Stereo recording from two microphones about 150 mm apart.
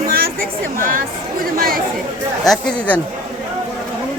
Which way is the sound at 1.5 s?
75° right (ahead or behind).